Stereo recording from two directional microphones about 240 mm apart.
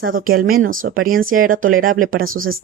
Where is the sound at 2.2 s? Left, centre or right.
Right.